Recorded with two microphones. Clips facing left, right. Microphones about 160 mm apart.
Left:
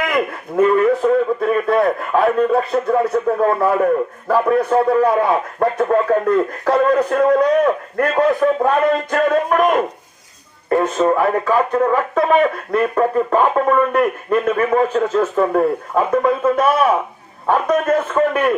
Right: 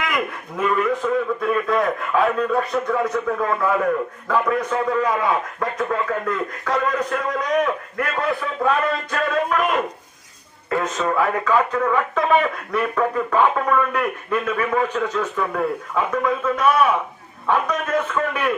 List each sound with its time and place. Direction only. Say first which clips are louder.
0.8 s a man's voice: left 6 dB; 35° left (ahead or behind)
10.7 s a man's voice: left 7 dB; 30° left (ahead or behind)